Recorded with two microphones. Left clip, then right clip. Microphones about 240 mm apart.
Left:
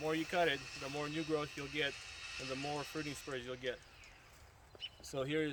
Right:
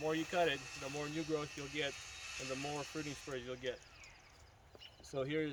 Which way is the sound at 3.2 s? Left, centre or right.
Centre.